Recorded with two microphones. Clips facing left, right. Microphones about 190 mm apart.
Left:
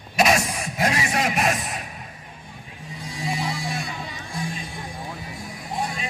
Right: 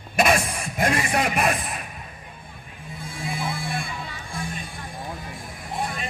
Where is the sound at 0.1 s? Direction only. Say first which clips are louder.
Even; 55° right (ahead or behind).